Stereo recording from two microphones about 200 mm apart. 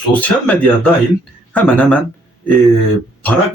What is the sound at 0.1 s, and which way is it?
A man's voice, 10° left (ahead or behind).